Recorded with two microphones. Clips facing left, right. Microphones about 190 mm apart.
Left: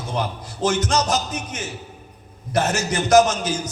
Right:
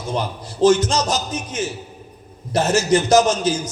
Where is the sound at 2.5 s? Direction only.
30° right (ahead or behind).